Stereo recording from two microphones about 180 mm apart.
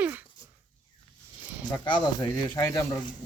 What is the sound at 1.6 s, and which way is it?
Speech, 25° left (ahead or behind).